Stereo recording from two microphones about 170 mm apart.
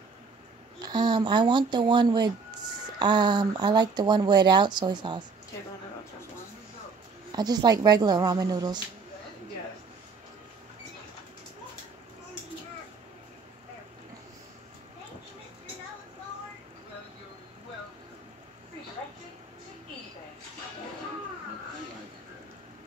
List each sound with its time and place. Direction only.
0.8 s speech: 25° right (ahead or behind)
7.3 s speech: 25° right (ahead or behind)